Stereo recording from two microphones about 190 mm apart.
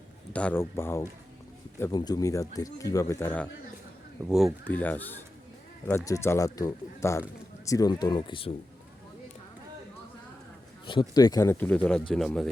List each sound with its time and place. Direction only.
0.3 s speech: 10° left (ahead or behind)
4.3 s speech: centre (ahead or behind)
4.6 s speech: 10° left (ahead or behind); by 8.5 s 25° left (ahead or behind)
11.1 s speech: 20° left (ahead or behind); by 12.5 s centre (ahead or behind)